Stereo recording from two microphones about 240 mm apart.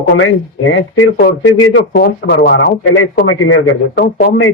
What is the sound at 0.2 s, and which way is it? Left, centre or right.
Speech, left.